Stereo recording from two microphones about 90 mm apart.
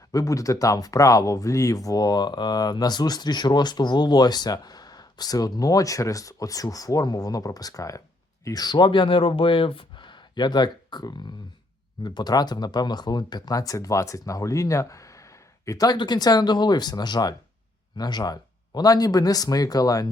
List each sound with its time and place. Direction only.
0.1 s speech: 40° left (ahead or behind)
16.0 s speech: 50° left (ahead or behind)